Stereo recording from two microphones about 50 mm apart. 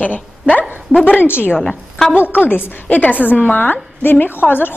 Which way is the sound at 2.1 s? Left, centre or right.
Left.